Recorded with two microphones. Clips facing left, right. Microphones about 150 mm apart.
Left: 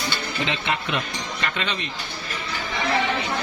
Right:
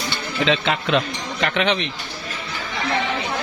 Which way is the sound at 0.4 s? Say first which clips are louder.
Right 7 dB; 90° right.